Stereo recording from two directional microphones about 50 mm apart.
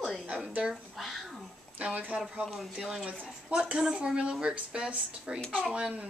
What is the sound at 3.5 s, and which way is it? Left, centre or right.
A woman's voice, centre.